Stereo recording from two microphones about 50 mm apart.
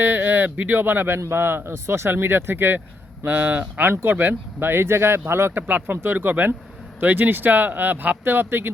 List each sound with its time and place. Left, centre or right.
0.0 s speech: right